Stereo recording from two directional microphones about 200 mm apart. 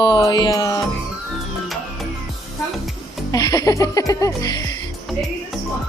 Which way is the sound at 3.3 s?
15° left (ahead or behind).